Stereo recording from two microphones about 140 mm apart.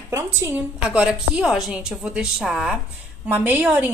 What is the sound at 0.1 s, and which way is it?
Speech, 20° right (ahead or behind).